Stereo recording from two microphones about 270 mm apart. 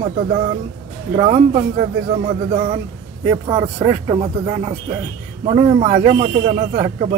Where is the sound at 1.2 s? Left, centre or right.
Right.